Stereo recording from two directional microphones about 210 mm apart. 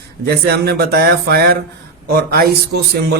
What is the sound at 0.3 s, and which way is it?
Speech, 50° right (ahead or behind).